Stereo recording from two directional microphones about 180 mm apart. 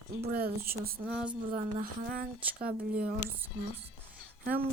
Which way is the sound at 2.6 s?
55° right (ahead or behind).